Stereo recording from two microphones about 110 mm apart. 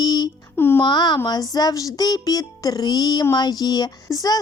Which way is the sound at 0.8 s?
40° left (ahead or behind).